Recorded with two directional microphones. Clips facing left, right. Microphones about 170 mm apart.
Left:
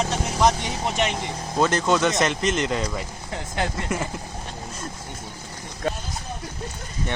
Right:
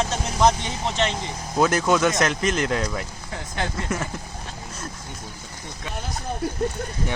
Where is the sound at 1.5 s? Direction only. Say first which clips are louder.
Right 1 dB; 5° right (ahead or behind).